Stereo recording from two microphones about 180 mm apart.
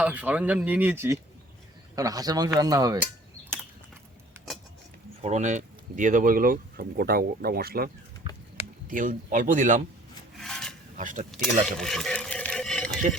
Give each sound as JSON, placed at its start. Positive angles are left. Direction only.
{"t": 0.0, "sound": "a man's voice", "side_deg": -10}
{"t": 5.2, "sound": "speech", "side_deg": -40}
{"t": 8.2, "sound": "a sound", "side_deg": -30}
{"t": 8.9, "sound": "speech", "side_deg": -50}
{"t": 10.3, "sound": "filing", "side_deg": 0}
{"t": 10.9, "sound": "speech", "side_deg": -45}
{"t": 11.3, "sound": "speech", "side_deg": 0}
{"t": 11.8, "sound": "a sound", "side_deg": 5}